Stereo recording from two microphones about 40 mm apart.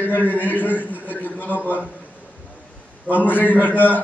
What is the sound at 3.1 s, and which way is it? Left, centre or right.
Speech, left.